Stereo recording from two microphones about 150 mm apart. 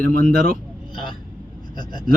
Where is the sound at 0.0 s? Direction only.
70° right (ahead or behind).